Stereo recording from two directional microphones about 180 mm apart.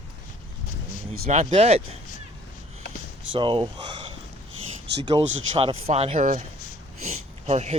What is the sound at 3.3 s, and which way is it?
Speech, 25° right (ahead or behind).